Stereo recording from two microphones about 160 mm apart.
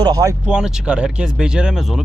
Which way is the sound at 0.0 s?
20° right (ahead or behind).